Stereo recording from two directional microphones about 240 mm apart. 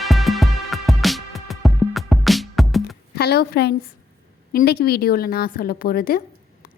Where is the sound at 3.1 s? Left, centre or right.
Left.